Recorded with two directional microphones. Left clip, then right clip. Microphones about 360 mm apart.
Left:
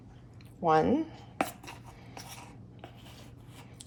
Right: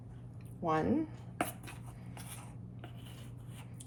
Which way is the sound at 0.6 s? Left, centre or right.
Left.